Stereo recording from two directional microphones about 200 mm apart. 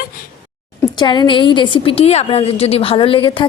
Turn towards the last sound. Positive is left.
turn(degrees=25)  # may be behind; listen again after turning